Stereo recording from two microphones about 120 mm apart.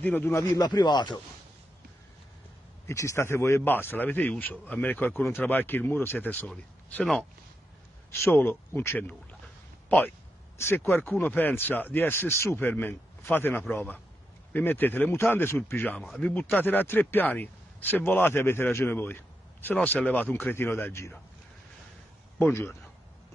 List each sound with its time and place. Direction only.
0.0 s speech: 15° left (ahead or behind); by 1.2 s 40° left (ahead or behind)
2.9 s speech: 25° left (ahead or behind)
6.4 s speech: 5° left (ahead or behind)
8.1 s speech: 20° left (ahead or behind)
22.4 s speech: 20° left (ahead or behind)